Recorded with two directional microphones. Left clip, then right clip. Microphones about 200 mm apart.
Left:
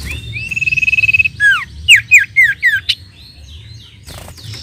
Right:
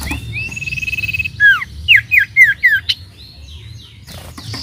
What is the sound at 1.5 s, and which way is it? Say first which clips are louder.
Squawk: even; 10° left (ahead or behind).